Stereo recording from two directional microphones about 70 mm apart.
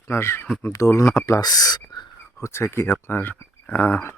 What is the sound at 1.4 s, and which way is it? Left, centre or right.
Speech, left.